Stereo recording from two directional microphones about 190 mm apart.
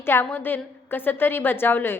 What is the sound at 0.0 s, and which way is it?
A woman's voice, 10° left (ahead or behind).